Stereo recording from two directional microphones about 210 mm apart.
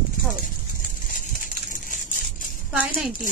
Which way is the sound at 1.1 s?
40° left (ahead or behind).